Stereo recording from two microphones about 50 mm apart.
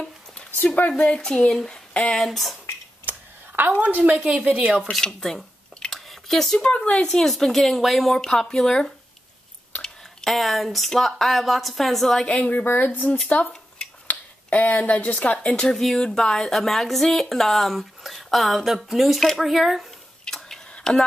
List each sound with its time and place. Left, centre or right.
0.7 s speech: left
1.0 s speech: centre
1.5 s speech: centre
3.1 s a sound: right
4.5 s speech: right
5.2 s a sound: centre
6.6 s speech: left
7.2 s speech: centre
12.3 s speech: left
12.6 s speech: left
15.3 s speech: centre
15.8 s speech: centre
20.2 s tick-tock: centre
20.7 s a sound: centre